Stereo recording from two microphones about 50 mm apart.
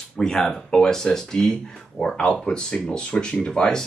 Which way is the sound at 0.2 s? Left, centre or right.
Centre.